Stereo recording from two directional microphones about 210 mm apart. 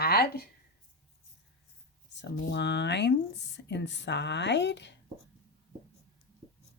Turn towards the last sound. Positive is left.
turn(degrees=55)  # may be behind; listen again after turning